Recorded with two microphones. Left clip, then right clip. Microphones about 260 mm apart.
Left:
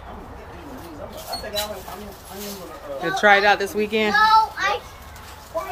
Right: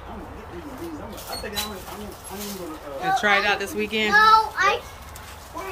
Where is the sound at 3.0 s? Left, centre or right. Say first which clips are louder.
Left 4 dB; centre.